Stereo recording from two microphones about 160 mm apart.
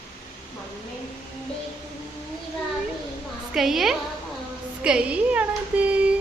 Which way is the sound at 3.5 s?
Centre (ahead or behind).